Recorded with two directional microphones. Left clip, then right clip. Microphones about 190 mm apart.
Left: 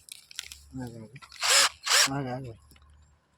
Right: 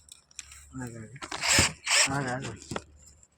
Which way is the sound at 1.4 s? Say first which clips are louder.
Left 2 dB; 60° left (ahead or behind).